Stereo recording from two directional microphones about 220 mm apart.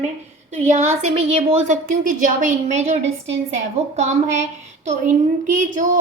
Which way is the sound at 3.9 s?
30° right (ahead or behind).